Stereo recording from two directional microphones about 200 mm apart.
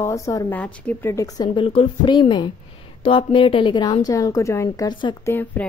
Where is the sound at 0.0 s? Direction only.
15° left (ahead or behind).